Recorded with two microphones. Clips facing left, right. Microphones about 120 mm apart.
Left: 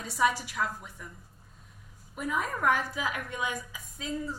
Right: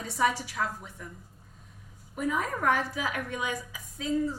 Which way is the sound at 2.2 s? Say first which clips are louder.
Right 1 dB; 50° right (ahead or behind).